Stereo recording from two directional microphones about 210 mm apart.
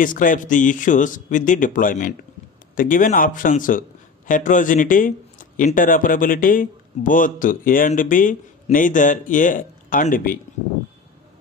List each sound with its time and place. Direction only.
0.0 s a man's voice: 40° left (ahead or behind)